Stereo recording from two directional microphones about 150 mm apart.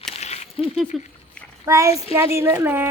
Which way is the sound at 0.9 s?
Centre (ahead or behind).